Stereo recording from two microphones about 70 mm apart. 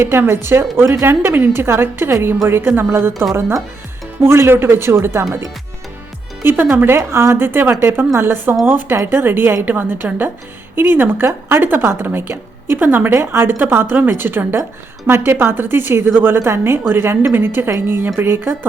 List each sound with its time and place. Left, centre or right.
0.0 s a woman's voice: right
6.4 s a woman's voice: right